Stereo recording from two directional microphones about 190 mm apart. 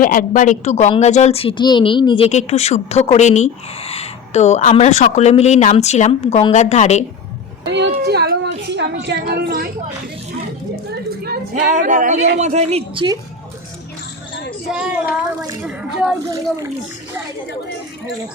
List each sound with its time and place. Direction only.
0.0 s a woman's voice: 45° left (ahead or behind)
7.7 s a sound: 60° right (ahead or behind)
11.5 s a woman's voice: 40° right (ahead or behind)
14.7 s speech: 5° right (ahead or behind)